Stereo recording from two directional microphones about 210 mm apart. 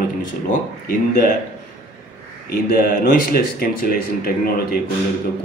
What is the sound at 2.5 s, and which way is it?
Speech, 45° left (ahead or behind).